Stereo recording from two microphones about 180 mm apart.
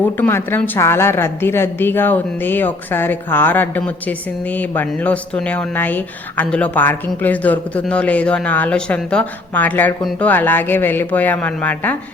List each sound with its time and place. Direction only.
0.0 s speech: 10° left (ahead or behind)